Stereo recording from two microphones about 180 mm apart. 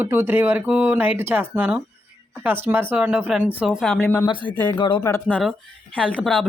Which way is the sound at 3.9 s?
10° left (ahead or behind).